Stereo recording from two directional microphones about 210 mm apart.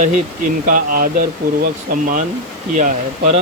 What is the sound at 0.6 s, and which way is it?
Speech, 40° right (ahead or behind).